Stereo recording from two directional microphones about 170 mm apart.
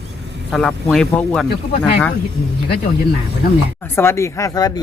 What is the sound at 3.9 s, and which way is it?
Speech, 15° left (ahead or behind).